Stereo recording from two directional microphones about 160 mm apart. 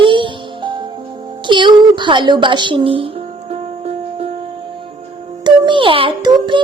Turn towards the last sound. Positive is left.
turn(degrees=-30)  # may be behind; listen again after turning